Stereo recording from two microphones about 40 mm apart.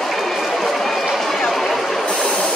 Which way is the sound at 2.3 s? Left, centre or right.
Left.